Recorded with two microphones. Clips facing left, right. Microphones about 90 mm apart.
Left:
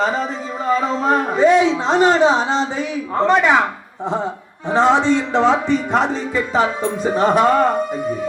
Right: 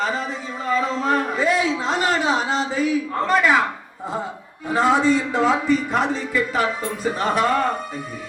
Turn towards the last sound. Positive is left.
turn(degrees=35)  # may be behind; listen again after turning